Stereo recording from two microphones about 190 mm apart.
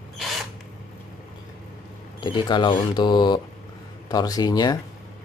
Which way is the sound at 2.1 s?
25° left (ahead or behind).